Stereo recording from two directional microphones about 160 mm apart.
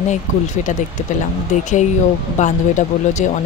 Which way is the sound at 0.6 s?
45° left (ahead or behind).